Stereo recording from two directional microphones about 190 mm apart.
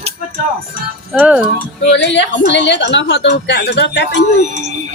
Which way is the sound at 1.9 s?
65° left (ahead or behind).